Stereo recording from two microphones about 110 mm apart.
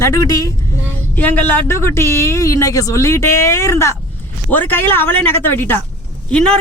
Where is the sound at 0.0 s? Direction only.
30° left (ahead or behind).